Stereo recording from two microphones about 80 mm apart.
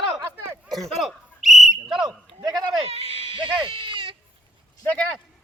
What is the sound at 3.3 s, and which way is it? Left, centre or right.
Goat, right.